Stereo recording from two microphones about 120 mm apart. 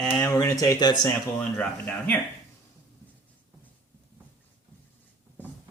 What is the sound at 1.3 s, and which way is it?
Speech, 15° left (ahead or behind).